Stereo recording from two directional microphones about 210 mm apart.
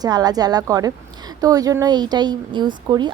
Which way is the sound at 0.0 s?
20° right (ahead or behind).